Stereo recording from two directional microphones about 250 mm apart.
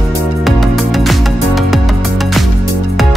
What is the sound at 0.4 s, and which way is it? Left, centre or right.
Music, centre.